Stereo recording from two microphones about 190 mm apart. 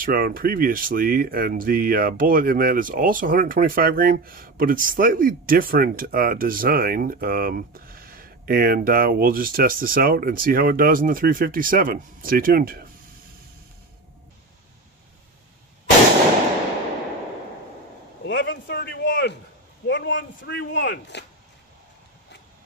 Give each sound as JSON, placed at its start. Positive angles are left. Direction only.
{"t": 0.0, "sound": "speech", "side_deg": -50}
{"t": 18.2, "sound": "a man's voice", "side_deg": 65}